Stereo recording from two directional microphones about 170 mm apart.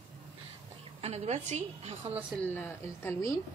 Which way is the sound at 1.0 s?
40° right (ahead or behind).